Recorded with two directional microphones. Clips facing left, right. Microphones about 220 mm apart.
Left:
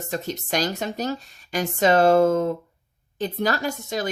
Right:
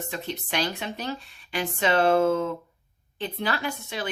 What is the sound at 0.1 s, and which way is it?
A woman's voice, 45° left (ahead or behind).